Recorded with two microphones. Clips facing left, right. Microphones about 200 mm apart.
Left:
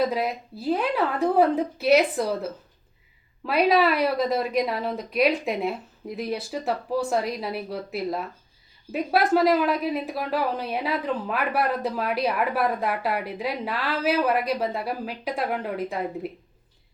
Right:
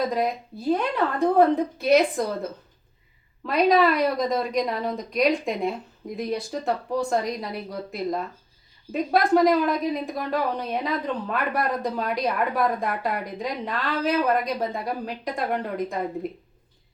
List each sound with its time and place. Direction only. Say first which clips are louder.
0.1 s speech: right 2 dB; 5° left (ahead or behind)